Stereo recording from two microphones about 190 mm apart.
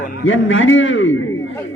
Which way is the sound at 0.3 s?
90° left.